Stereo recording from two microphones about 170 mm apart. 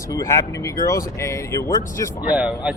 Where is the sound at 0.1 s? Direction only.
20° left (ahead or behind).